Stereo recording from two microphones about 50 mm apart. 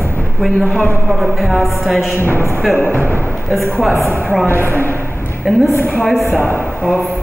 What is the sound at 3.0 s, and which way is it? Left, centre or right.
Speech, left.